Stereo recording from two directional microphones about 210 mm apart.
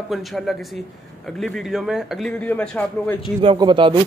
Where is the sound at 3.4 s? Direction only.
20° right (ahead or behind).